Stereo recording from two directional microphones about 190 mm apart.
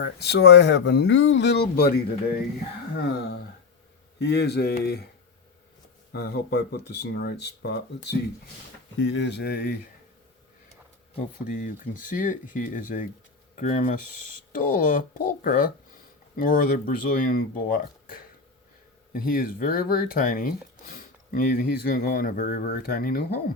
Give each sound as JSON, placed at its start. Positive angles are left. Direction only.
{"t": 0.0, "sound": "speech", "side_deg": 60}
{"t": 4.2, "sound": "speech", "side_deg": 60}
{"t": 6.1, "sound": "speech", "side_deg": 60}
{"t": 11.4, "sound": "speech", "side_deg": 45}